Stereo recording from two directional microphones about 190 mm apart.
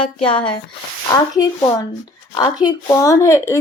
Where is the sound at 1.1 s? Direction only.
20° left (ahead or behind).